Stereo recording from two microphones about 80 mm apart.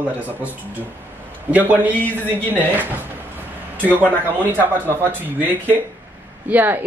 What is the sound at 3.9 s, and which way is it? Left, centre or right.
Speech, left.